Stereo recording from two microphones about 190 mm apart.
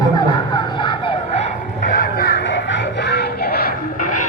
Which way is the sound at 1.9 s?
50° left (ahead or behind).